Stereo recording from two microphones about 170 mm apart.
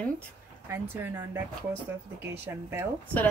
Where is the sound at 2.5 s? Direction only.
15° right (ahead or behind).